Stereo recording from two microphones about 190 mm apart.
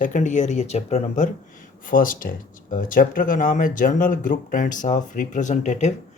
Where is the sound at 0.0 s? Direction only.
40° left (ahead or behind).